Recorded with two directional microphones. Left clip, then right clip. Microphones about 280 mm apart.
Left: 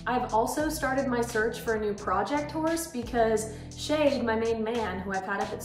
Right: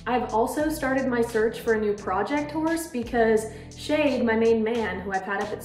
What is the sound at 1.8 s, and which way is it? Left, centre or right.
A woman's voice, centre.